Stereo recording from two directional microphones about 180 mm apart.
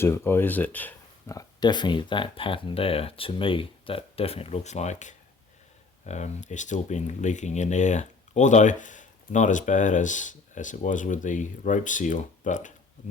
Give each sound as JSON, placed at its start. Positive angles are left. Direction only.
{"t": 0.0, "sound": "speech", "side_deg": 15}